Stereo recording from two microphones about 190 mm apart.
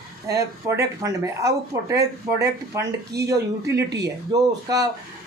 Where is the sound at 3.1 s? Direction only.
60° right (ahead or behind).